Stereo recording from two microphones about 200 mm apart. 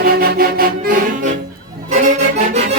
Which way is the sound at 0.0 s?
50° right (ahead or behind).